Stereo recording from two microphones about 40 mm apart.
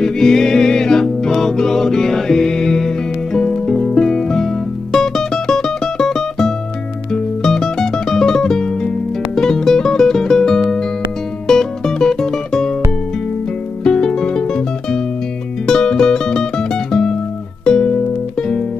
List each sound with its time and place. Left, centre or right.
0.0 s music: centre
13.8 s music: centre